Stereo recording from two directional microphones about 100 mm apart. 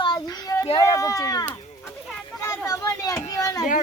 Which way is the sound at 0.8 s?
35° left (ahead or behind).